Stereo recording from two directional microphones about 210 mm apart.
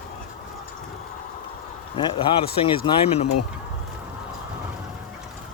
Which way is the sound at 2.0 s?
25° left (ahead or behind).